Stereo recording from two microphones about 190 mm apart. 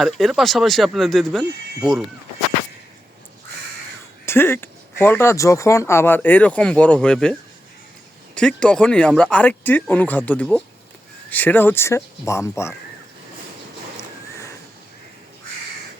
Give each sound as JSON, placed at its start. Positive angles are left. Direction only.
{"t": 0.0, "sound": "speech", "side_deg": 0}
{"t": 4.3, "sound": "speech", "side_deg": 10}
{"t": 8.4, "sound": "speech", "side_deg": 5}
{"t": 13.9, "sound": "a sound", "side_deg": 15}